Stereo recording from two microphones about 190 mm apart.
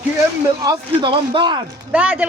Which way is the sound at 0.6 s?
25° right (ahead or behind).